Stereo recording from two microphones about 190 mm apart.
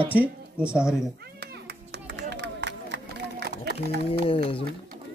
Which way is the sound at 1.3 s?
60° right (ahead or behind).